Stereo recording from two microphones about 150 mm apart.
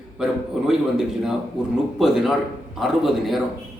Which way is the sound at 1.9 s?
Centre (ahead or behind).